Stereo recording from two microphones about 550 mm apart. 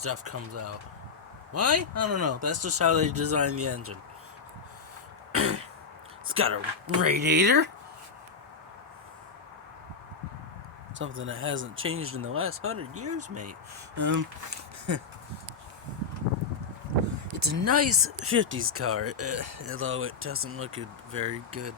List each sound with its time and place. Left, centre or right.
0.0 s speech: right
5.3 s throat clearing: right
6.2 s speech: right
10.9 s speech: right
17.3 s speech: right